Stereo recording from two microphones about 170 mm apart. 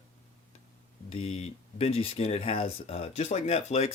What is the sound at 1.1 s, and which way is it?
Speech, 35° left (ahead or behind).